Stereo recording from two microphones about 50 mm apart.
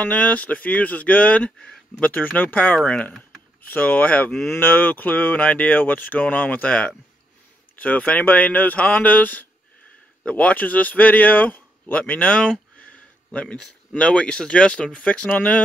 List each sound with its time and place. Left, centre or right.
0.0 s speech: left
4.5 s speech: left